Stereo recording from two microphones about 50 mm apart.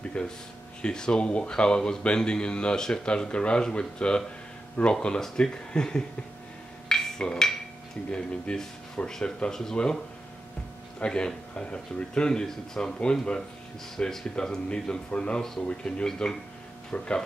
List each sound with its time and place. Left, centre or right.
0.2 s speech: left
6.9 s a sound: centre
8.1 s speech: centre
11.0 s speech: centre